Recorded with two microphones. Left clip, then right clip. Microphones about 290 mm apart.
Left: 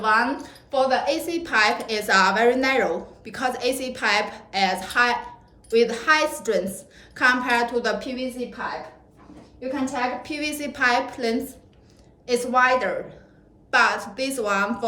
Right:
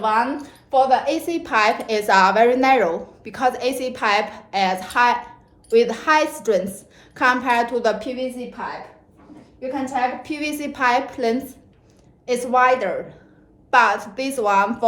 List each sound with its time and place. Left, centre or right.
0.0 s a woman's voice: centre
10.2 s a woman's voice: centre